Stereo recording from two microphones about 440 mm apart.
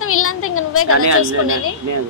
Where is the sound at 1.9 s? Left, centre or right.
Right.